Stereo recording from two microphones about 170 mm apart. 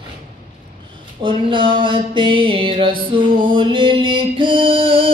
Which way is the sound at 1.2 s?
30° right (ahead or behind).